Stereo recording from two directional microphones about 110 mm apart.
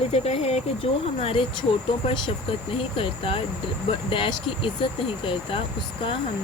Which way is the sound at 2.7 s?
55° left (ahead or behind).